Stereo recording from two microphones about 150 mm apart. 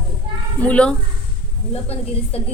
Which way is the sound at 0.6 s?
10° left (ahead or behind).